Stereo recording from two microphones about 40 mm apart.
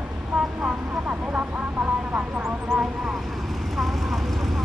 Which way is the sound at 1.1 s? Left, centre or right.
Right.